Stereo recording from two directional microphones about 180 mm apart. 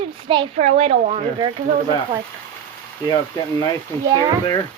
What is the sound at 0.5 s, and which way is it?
Speech, 35° right (ahead or behind).